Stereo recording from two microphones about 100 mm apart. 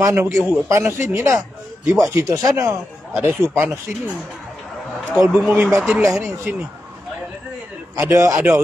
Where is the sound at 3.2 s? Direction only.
20° right (ahead or behind).